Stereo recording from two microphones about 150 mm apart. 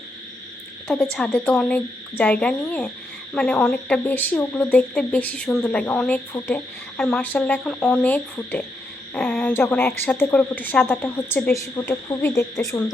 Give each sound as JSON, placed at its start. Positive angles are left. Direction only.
{"t": 1.1, "sound": "speech", "side_deg": 5}